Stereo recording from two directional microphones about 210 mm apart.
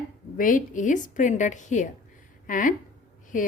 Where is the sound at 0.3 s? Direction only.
40° left (ahead or behind).